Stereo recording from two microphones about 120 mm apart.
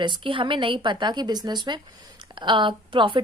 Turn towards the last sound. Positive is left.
turn(degrees=-45)  # may be behind; listen again after turning